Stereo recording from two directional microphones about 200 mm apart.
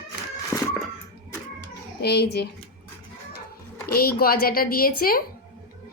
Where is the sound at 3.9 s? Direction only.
50° left (ahead or behind).